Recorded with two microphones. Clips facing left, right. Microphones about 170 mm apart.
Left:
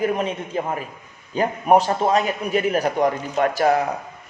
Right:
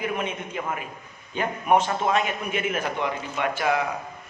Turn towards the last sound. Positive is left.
turn(degrees=40)  # may be behind; listen again after turning